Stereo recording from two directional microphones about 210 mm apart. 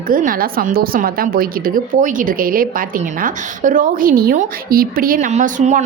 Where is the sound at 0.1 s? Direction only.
40° right (ahead or behind).